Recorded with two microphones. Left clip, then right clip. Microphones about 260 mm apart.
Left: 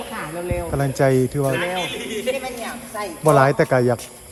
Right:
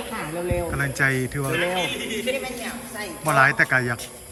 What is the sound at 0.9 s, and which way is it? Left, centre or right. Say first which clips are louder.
Speech: left 5 dB; left.